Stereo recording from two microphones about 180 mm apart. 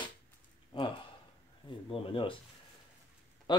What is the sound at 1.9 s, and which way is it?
Speech, 30° left (ahead or behind).